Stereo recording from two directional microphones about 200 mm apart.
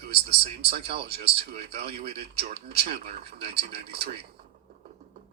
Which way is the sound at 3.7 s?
55° right (ahead or behind).